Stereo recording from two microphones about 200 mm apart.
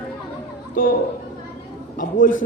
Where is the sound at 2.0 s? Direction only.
40° left (ahead or behind).